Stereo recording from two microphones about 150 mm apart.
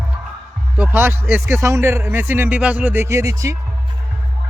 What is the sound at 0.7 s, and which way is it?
A man's voice, 10° right (ahead or behind).